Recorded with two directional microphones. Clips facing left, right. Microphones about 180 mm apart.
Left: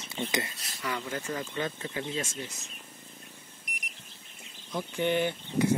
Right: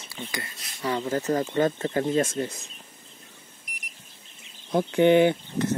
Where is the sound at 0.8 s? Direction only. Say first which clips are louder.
Right 8 dB; 30° right (ahead or behind); by 2.5 s 55° right (ahead or behind).